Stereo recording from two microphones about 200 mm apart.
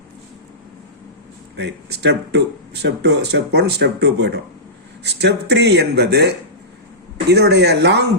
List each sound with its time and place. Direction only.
1.5 s speech: 55° right (ahead or behind)